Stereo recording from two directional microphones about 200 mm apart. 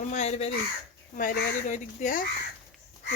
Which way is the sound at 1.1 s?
45° left (ahead or behind).